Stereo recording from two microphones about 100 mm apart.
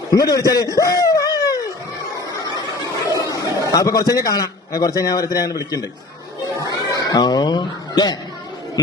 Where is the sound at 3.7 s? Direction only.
35° left (ahead or behind).